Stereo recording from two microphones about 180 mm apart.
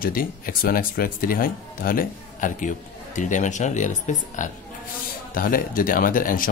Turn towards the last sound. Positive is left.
turn(degrees=50)  # may be behind; listen again after turning